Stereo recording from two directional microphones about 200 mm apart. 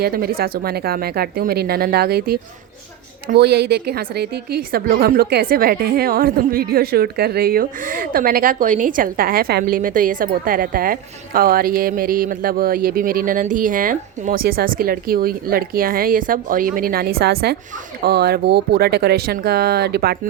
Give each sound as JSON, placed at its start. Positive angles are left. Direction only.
{"t": 0.0, "sound": "a woman's voice", "side_deg": -45}